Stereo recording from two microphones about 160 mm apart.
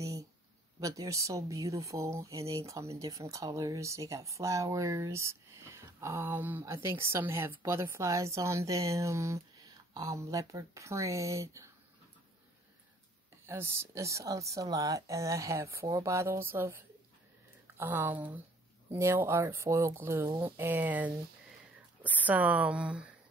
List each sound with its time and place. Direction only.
0.0 s a sound: 20° right (ahead or behind)
0.7 s speech: 20° right (ahead or behind)
13.5 s speech: 20° right (ahead or behind)